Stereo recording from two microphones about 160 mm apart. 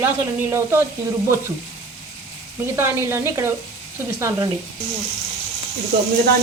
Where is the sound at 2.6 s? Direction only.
15° right (ahead or behind).